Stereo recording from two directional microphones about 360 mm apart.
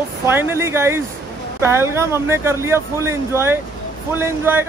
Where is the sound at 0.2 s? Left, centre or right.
Centre.